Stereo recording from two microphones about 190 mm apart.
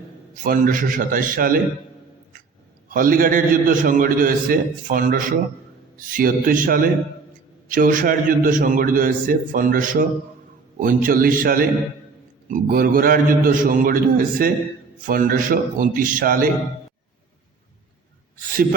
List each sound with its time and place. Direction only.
0.4 s a man's voice: 45° right (ahead or behind)
2.9 s a man's voice: 45° right (ahead or behind)